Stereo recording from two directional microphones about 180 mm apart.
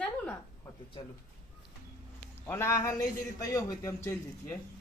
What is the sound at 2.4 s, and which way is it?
Speech, 15° left (ahead or behind).